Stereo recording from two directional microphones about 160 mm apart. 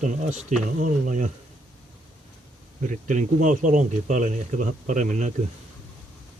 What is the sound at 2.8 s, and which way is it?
Speech, 50° right (ahead or behind).